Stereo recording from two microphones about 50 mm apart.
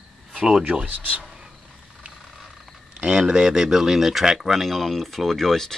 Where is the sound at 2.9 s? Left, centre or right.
Centre.